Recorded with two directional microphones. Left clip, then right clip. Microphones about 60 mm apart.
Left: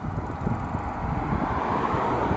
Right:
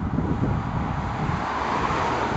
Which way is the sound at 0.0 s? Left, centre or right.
Centre.